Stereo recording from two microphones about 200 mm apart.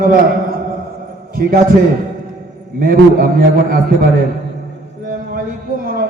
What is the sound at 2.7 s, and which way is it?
A man's voice, 45° right (ahead or behind).